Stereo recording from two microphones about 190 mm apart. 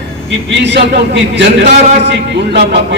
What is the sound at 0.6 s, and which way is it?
A man's voice, 65° right (ahead or behind).